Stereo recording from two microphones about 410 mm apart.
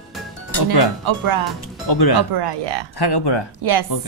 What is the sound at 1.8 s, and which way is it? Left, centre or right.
Speech, left.